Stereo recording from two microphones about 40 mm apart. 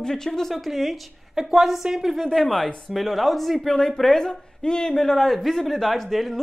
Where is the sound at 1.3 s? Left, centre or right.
Centre.